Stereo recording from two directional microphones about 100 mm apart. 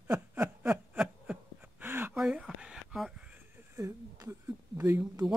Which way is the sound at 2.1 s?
10° right (ahead or behind).